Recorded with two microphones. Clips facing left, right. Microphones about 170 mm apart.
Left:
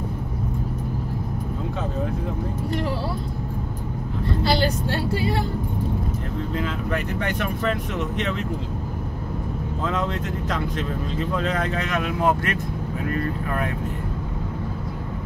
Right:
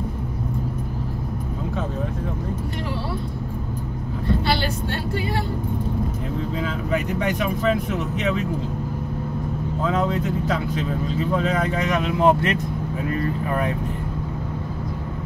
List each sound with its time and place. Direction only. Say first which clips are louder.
4.4 s speech: left 2 dB; 35° left (ahead or behind)
6.6 s speech: right 3 dB; 10° right (ahead or behind)
9.8 s speech: right 4 dB; 10° right (ahead or behind)
12.0 s speech: right 4 dB; 20° right (ahead or behind)